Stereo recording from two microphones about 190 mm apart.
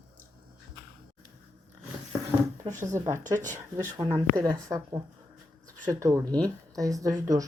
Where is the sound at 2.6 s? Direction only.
25° right (ahead or behind).